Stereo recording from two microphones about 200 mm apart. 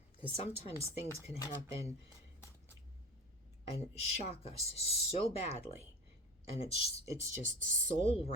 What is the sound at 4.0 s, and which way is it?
Speech, 30° left (ahead or behind).